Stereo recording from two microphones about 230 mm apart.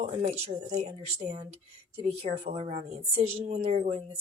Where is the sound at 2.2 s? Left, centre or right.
Right.